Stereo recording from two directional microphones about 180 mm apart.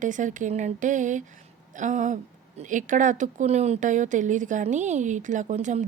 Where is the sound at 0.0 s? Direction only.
45° right (ahead or behind).